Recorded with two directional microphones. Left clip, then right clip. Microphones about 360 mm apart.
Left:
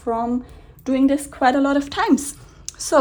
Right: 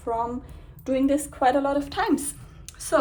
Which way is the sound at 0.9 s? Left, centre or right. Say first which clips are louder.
Left 4 dB; left.